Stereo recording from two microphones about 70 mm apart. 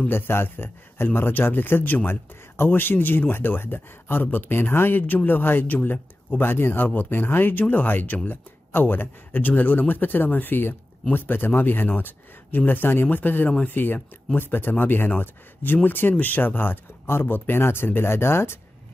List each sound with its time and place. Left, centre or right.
0.1 s speech: left